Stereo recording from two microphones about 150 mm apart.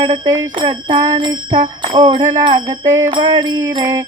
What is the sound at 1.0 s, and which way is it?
Speech, 25° right (ahead or behind).